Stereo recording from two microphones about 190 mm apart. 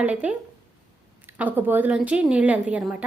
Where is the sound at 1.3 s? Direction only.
10° right (ahead or behind).